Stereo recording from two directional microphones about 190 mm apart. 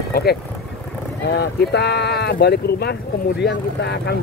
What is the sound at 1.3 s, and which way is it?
Speech, 60° left (ahead or behind).